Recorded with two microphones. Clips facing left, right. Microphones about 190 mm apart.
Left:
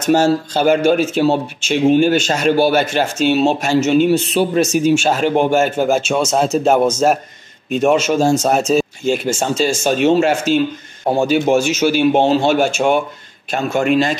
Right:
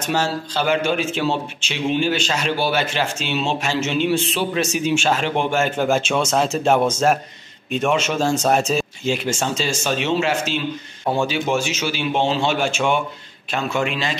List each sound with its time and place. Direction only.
0.0 s a man's voice: 45° left (ahead or behind)
5.5 s a man's voice: 5° left (ahead or behind)
7.7 s a man's voice: 40° left (ahead or behind)
8.4 s a man's voice: centre (ahead or behind)
9.0 s a man's voice: 50° left (ahead or behind)